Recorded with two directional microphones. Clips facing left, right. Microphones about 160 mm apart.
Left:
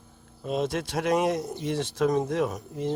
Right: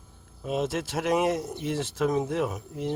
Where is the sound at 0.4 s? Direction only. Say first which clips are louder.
Even; 5° right (ahead or behind).